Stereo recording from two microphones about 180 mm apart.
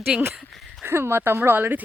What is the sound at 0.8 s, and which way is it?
Speech, 15° right (ahead or behind).